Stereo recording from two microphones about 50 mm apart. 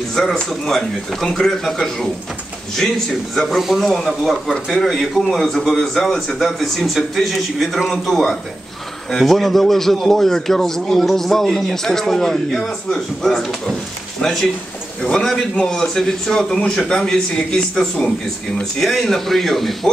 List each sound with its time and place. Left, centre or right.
0.1 s speech: centre